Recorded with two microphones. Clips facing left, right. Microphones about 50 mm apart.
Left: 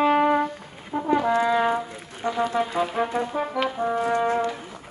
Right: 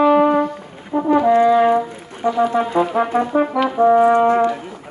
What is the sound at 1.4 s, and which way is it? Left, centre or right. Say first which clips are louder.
Speech: right 8 dB; centre.